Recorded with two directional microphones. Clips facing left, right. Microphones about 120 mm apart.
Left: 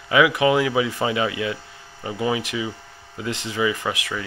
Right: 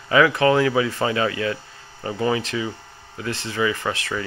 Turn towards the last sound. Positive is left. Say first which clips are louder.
# even
turn(degrees=10)  # may be behind; listen again after turning